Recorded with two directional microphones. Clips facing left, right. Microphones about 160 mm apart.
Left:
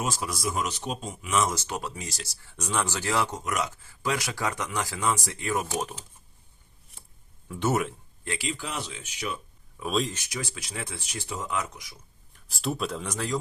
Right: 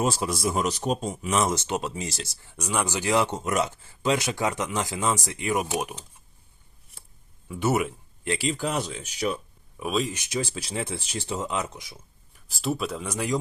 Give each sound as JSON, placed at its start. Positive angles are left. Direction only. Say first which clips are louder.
{"t": 0.0, "sound": "speech", "louder": "right 5 dB", "side_deg": -30}
{"t": 1.5, "sound": "speech", "louder": "right 4 dB", "side_deg": -20}
{"t": 2.6, "sound": "speech", "louder": "right 2 dB", "side_deg": -10}
{"t": 7.4, "sound": "speech", "louder": "right 2 dB", "side_deg": -5}
{"t": 8.3, "sound": "speech", "louder": "right 6 dB", "side_deg": -35}
{"t": 9.9, "sound": "speech", "louder": "right 1 dB", "side_deg": -5}
{"t": 10.2, "sound": "speech", "louder": "right 6 dB", "side_deg": -25}
{"t": 12.3, "sound": "speech", "louder": "right 3 dB", "side_deg": 0}